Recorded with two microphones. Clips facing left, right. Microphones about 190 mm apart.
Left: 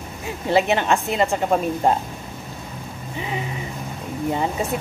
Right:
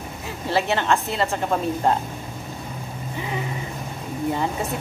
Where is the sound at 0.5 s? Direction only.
20° left (ahead or behind).